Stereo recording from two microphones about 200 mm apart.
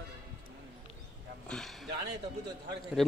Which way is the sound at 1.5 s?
Centre (ahead or behind).